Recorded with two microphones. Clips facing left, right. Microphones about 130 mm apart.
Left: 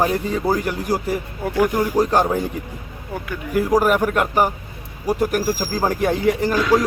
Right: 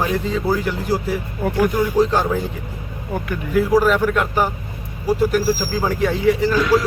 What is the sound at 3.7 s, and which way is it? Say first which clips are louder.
Speech: even; 15° left (ahead or behind).